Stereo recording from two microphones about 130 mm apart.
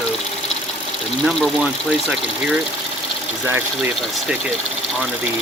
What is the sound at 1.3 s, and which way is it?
Speech, centre (ahead or behind).